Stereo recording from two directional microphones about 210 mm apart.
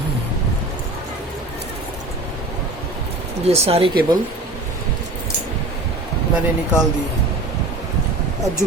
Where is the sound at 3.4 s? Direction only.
30° right (ahead or behind).